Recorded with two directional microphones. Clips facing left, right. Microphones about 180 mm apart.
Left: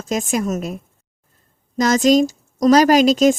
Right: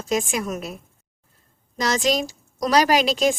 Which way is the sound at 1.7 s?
45° left (ahead or behind).